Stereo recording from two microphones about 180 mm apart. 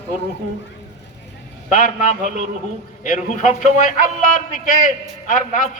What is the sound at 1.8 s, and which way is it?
Speech, 45° left (ahead or behind).